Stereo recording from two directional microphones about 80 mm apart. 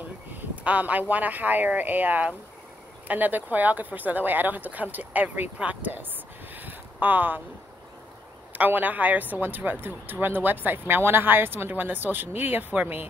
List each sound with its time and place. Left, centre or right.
0.3 s speech: centre
6.5 s a sound: right
8.5 s speech: right